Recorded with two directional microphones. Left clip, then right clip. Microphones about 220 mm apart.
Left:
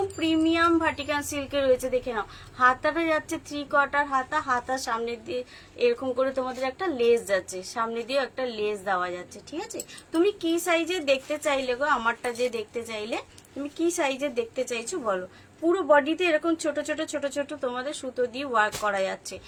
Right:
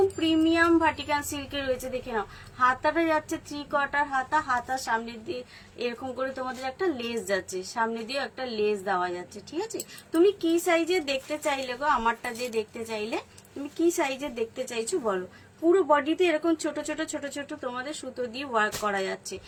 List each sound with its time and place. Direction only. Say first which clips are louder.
0.2 s a woman's voice: even; 15° left (ahead or behind)